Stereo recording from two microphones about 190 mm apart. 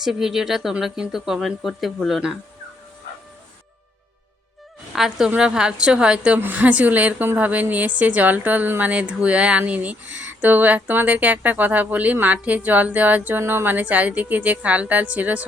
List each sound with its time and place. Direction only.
0.0 s speech: centre (ahead or behind)
4.9 s a woman's voice: centre (ahead or behind)